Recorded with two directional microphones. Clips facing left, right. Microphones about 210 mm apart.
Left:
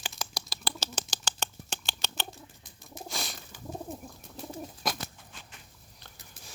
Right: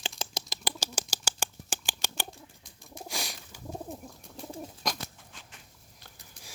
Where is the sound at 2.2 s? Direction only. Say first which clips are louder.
Left 1 dB; centre (ahead or behind).